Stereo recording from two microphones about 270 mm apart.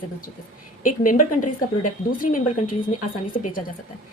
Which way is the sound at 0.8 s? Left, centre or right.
Left.